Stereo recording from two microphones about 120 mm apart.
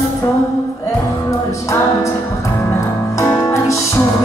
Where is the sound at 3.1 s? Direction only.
25° left (ahead or behind).